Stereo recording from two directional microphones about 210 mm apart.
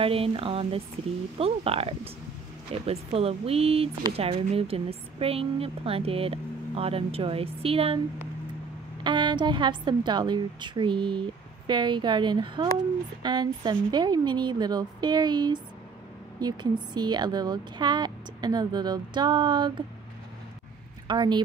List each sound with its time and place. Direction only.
0.0 s speech: 25° right (ahead or behind)
9.0 s speech: 20° right (ahead or behind)
21.1 s speech: 20° right (ahead or behind)